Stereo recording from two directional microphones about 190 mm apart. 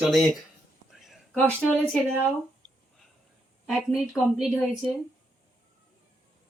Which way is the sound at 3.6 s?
Centre (ahead or behind).